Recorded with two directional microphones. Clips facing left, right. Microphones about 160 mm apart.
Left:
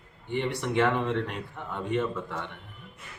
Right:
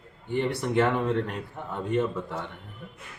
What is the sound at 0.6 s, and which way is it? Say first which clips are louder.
A man's voice: even; 10° right (ahead or behind).